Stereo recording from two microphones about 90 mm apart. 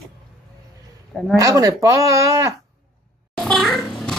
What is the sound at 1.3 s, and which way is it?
Speech, 40° right (ahead or behind).